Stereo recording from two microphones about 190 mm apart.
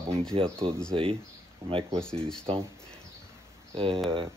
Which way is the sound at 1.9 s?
5° left (ahead or behind).